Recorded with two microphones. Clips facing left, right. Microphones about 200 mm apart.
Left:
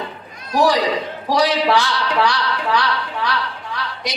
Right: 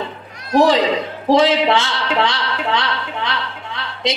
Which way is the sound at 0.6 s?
25° right (ahead or behind).